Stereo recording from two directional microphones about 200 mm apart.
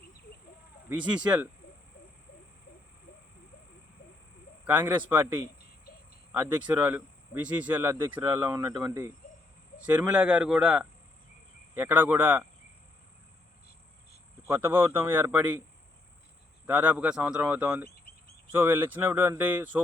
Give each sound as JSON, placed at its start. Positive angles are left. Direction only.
{"t": 0.9, "sound": "speech", "side_deg": -5}
{"t": 4.6, "sound": "speech", "side_deg": -10}
{"t": 6.3, "sound": "speech", "side_deg": -10}
{"t": 14.4, "sound": "speech", "side_deg": -10}
{"t": 16.6, "sound": "speech", "side_deg": -10}
{"t": 17.8, "sound": "a sound", "side_deg": 50}
{"t": 18.5, "sound": "speech", "side_deg": -10}